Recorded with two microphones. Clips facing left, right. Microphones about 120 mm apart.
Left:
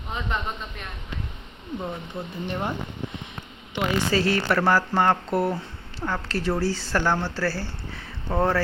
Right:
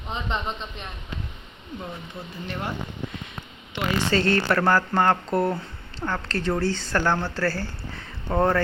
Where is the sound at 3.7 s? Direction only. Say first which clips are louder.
Even; 5° left (ahead or behind).